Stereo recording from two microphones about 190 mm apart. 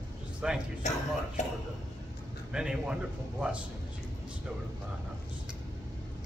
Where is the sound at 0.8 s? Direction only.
40° left (ahead or behind).